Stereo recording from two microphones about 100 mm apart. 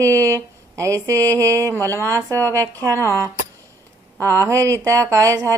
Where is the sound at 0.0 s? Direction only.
30° right (ahead or behind).